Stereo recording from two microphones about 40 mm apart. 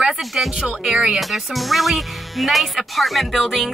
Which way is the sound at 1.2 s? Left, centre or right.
Centre.